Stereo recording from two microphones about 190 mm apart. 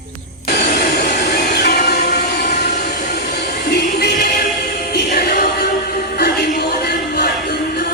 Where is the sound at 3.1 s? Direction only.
60° left (ahead or behind).